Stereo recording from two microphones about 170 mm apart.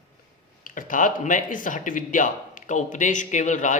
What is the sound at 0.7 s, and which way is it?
A man's voice, 50° left (ahead or behind).